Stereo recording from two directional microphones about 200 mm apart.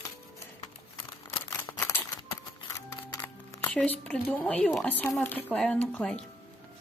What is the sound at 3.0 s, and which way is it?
Music, 20° left (ahead or behind).